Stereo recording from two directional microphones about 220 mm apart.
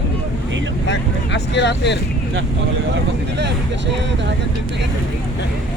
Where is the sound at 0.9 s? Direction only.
55° left (ahead or behind).